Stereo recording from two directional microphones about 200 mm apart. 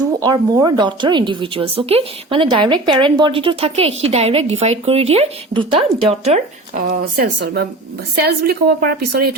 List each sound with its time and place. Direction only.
0.2 s a woman's voice: 20° right (ahead or behind)
6.8 s a woman's voice: 50° right (ahead or behind)